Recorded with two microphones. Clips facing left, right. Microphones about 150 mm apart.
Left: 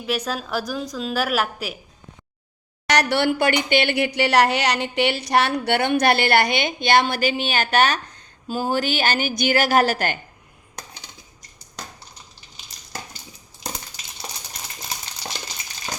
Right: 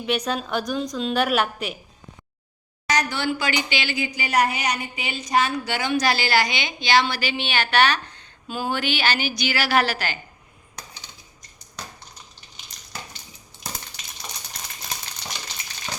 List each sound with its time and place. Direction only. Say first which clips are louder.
0.0 s a woman's voice: right 1 dB; centre (ahead or behind)
2.8 s a woman's voice: left 5 dB; 70° left (ahead or behind); by 10.2 s 50° left (ahead or behind)